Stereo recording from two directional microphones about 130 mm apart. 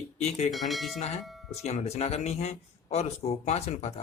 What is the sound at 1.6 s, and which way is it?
Speech, 55° left (ahead or behind).